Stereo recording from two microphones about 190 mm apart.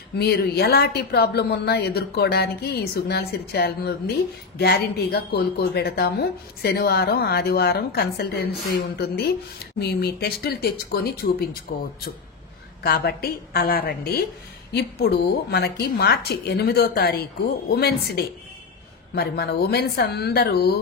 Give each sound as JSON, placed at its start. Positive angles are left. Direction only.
{"t": 0.2, "sound": "a woman's voice", "side_deg": 55}
{"t": 12.8, "sound": "a woman's voice", "side_deg": 55}